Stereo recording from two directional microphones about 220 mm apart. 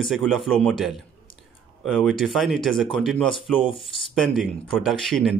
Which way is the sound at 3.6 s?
25° left (ahead or behind).